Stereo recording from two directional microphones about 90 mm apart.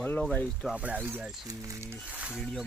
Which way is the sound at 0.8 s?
15° right (ahead or behind).